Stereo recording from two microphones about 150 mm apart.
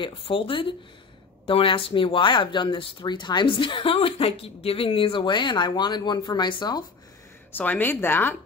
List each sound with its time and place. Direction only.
0.0 s speech: 35° left (ahead or behind)
7.5 s speech: 10° left (ahead or behind)